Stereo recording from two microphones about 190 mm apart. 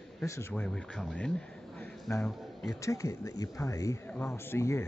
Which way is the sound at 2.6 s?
15° left (ahead or behind).